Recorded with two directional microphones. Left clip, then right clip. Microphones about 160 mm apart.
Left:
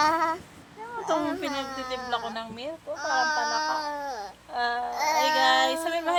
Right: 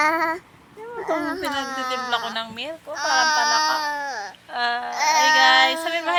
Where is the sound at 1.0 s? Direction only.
25° right (ahead or behind).